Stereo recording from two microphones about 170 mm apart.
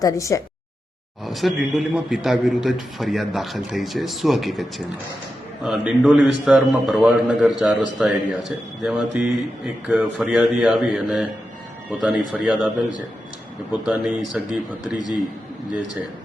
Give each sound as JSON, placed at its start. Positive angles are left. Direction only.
{"t": 0.0, "sound": "a sound", "side_deg": 20}
{"t": 1.2, "sound": "speech", "side_deg": 0}
{"t": 5.6, "sound": "speech", "side_deg": 0}